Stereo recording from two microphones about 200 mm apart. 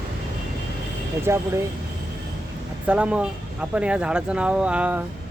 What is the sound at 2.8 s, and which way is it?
Speech, 5° right (ahead or behind).